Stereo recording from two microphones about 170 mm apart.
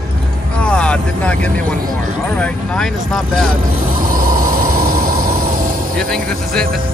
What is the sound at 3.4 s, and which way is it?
Vehicle, 55° right (ahead or behind).